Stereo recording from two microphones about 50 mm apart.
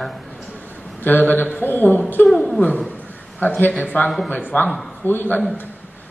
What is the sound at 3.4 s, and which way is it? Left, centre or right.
A man's voice, left.